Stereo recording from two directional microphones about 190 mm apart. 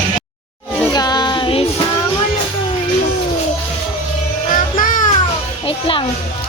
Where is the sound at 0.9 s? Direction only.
20° left (ahead or behind).